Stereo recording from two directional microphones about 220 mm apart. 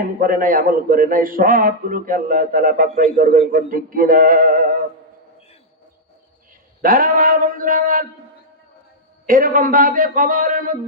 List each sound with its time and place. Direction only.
0.2 s a man's voice: 40° right (ahead or behind)
6.8 s speech: 40° right (ahead or behind)
9.2 s a man's voice: 40° right (ahead or behind)